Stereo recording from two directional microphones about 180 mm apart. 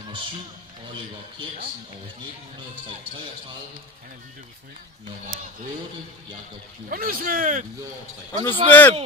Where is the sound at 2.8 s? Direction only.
30° right (ahead or behind).